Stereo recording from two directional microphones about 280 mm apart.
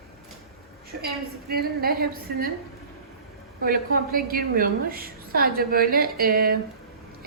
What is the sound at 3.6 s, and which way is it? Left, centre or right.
A woman's voice, right.